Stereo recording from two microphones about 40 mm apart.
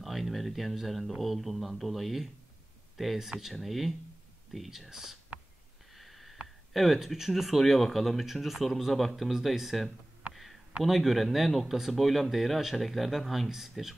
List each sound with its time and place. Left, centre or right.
0.0 s speech: centre
3.2 s speech: centre
5.9 s a sound: centre
6.7 s speech: centre
10.3 s a sound: centre
10.8 s speech: centre